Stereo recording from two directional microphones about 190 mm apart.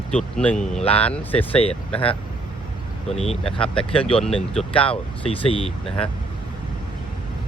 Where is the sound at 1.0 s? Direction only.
10° left (ahead or behind).